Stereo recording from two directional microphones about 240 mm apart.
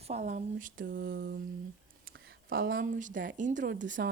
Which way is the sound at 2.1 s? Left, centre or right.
Right.